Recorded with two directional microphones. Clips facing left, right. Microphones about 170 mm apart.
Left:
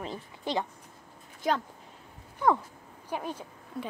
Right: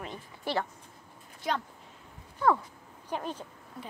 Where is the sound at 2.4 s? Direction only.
15° left (ahead or behind).